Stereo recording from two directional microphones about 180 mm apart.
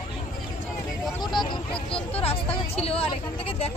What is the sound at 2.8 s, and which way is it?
Speech, 30° left (ahead or behind).